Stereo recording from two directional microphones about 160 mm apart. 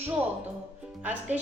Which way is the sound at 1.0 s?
10° right (ahead or behind).